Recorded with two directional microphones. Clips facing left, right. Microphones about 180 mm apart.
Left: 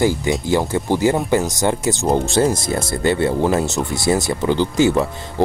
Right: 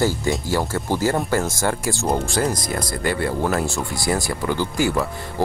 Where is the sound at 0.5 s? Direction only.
20° left (ahead or behind).